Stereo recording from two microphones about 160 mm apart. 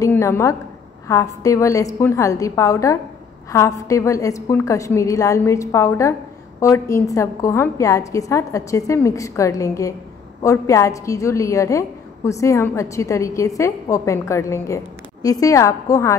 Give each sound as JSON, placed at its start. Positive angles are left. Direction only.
{"t": 0.0, "sound": "a woman's voice", "side_deg": 15}